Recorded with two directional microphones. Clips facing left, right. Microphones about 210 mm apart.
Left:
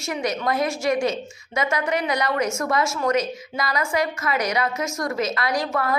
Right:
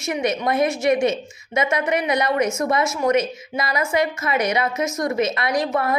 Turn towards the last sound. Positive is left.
turn(degrees=-20)  # may be behind; listen again after turning